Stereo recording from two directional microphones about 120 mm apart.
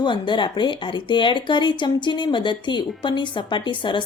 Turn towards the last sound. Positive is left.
turn(degrees=40)  # may be behind; listen again after turning